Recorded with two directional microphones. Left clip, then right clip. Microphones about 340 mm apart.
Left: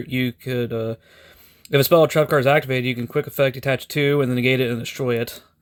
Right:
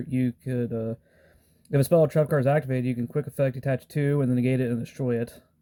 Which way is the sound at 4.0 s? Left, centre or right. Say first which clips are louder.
Left 7 dB; left.